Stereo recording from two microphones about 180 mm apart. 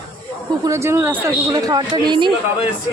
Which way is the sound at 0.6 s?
15° right (ahead or behind).